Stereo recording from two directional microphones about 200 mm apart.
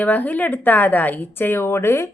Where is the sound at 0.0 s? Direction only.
10° left (ahead or behind).